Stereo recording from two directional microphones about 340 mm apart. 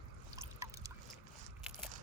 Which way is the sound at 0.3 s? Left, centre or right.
Centre.